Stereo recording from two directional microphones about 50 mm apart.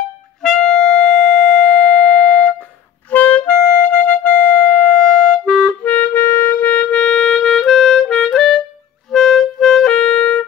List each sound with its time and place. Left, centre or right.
0.4 s music: centre
3.1 s music: left
5.0 s clarinet: centre
5.9 s music: left; by 8.1 s centre
8.3 s clarinet: centre
9.1 s music: centre